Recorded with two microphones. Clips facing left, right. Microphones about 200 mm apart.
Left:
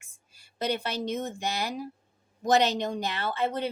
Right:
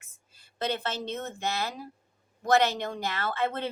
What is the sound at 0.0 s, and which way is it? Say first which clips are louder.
A woman's voice: even; 10° left (ahead or behind).